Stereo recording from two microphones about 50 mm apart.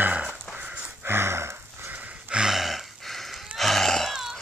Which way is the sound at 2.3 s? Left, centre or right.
Centre.